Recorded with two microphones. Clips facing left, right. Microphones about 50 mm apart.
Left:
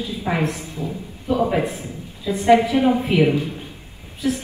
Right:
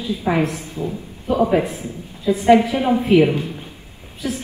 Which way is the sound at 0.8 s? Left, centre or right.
Right.